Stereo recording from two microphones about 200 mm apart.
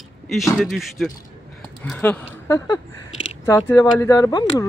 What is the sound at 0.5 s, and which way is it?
Speech, centre (ahead or behind).